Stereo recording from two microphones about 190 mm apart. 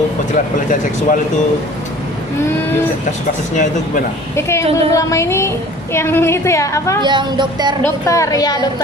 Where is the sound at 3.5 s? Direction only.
40° left (ahead or behind).